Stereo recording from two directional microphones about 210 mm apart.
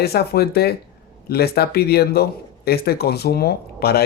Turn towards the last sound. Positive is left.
turn(degrees=50)  # may be behind; listen again after turning